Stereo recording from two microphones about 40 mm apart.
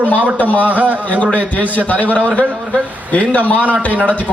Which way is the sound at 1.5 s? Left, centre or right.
Left.